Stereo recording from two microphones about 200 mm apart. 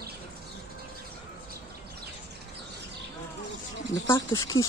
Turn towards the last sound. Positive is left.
turn(degrees=15)  # may be behind; listen again after turning